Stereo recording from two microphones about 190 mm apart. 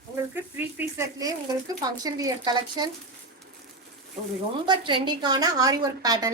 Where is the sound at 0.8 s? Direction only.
15° right (ahead or behind).